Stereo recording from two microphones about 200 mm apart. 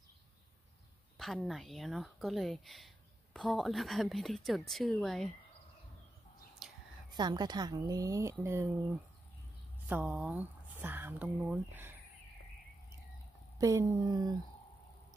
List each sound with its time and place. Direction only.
1.1 s a woman's voice: centre (ahead or behind)
6.6 s a sound: centre (ahead or behind)
7.1 s a woman's voice: 20° right (ahead or behind)
9.8 s speech: 5° right (ahead or behind)
13.6 s speech: 15° right (ahead or behind)